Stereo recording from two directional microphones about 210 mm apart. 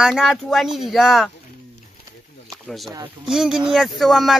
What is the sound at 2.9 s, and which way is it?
Speech, 15° right (ahead or behind).